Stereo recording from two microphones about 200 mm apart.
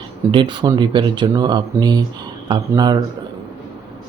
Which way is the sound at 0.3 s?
25° right (ahead or behind).